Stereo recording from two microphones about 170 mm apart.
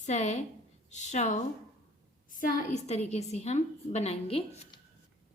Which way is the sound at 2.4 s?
40° left (ahead or behind).